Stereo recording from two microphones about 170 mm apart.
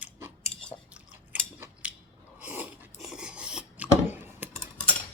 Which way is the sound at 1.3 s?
10° right (ahead or behind).